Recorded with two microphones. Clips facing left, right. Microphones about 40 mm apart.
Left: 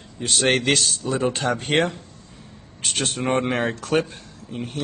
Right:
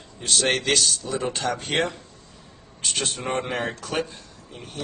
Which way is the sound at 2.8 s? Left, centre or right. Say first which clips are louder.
Left 2 dB; left.